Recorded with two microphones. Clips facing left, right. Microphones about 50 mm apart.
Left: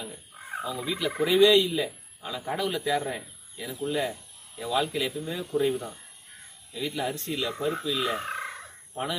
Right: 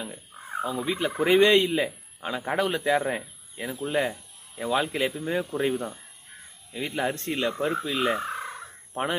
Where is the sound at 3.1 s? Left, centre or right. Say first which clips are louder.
Right 5 dB; right.